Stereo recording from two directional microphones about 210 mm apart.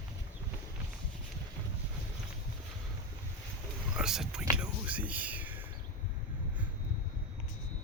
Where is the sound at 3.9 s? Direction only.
Centre (ahead or behind).